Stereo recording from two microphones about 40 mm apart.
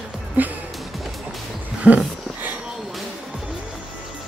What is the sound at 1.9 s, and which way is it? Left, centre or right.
Speech, right.